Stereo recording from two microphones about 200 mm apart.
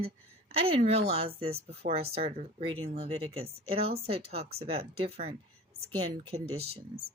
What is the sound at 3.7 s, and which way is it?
Speech, 30° right (ahead or behind).